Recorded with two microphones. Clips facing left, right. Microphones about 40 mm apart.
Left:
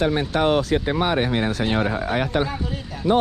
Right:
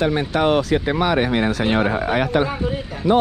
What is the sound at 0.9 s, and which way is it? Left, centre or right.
Speech, right.